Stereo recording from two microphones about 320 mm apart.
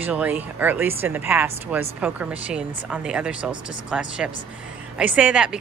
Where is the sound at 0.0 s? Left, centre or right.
Centre.